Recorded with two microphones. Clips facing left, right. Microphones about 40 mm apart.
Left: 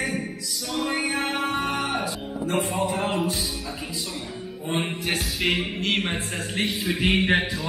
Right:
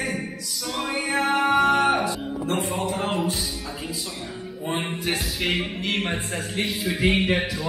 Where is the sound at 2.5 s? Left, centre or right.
Centre.